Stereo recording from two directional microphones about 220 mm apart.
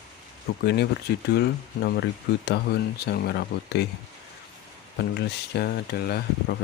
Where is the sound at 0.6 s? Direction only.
50° left (ahead or behind).